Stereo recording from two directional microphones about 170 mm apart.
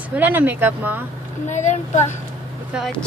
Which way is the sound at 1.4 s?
45° left (ahead or behind).